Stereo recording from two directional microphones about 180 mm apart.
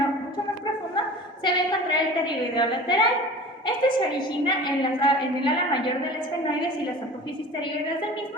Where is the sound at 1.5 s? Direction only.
25° left (ahead or behind).